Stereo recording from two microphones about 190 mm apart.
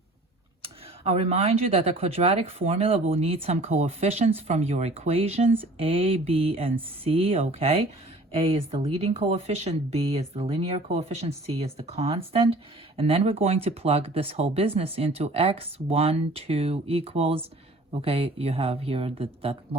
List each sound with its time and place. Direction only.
1.0 s speech: 35° right (ahead or behind)